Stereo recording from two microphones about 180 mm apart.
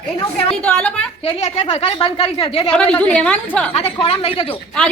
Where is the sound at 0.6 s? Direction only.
5° left (ahead or behind).